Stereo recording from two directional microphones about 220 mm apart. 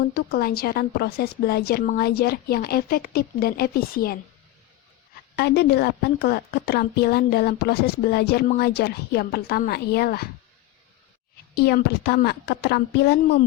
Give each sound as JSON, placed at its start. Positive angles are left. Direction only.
{"t": 0.1, "sound": "a woman's voice", "side_deg": 45}
{"t": 5.4, "sound": "a woman's voice", "side_deg": 50}
{"t": 11.5, "sound": "a woman's voice", "side_deg": 45}